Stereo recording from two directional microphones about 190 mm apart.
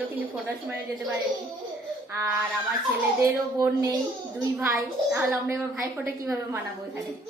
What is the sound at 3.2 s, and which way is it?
A woman's voice, 15° right (ahead or behind).